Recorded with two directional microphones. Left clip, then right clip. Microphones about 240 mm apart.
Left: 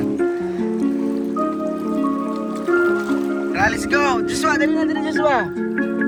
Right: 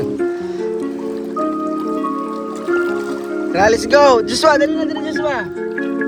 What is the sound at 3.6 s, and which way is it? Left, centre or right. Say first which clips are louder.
Speech: right 8 dB; centre.